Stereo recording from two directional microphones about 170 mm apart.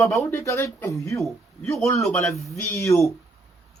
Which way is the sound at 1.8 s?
15° left (ahead or behind).